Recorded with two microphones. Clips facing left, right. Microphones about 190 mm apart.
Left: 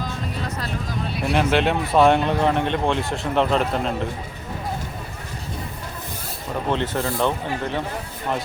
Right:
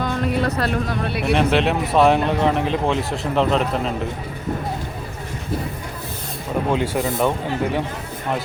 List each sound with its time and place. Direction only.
0.0 s speech: 65° right (ahead or behind)
1.3 s speech: centre (ahead or behind)
6.7 s speech: 10° right (ahead or behind)